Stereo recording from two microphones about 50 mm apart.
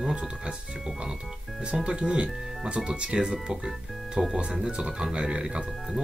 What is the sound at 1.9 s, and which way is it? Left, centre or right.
Speech, centre.